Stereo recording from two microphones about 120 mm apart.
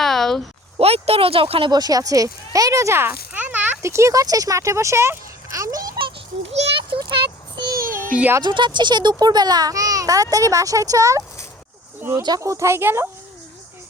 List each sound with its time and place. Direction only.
0.0 s a sound: 5° left (ahead or behind)
0.8 s speech: 55° right (ahead or behind)
1.7 s speech: 30° right (ahead or behind)
6.5 s a sound: 50° right (ahead or behind)
8.1 s speech: 10° right (ahead or behind)
8.4 s a child's voice: 40° right (ahead or behind); by 13.1 s 20° right (ahead or behind)